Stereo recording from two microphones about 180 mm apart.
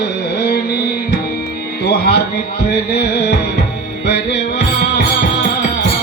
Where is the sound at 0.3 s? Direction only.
65° left (ahead or behind).